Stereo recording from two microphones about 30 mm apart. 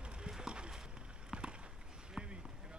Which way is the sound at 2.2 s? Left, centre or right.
Right.